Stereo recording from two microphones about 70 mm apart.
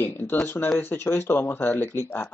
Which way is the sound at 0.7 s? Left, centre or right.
Left.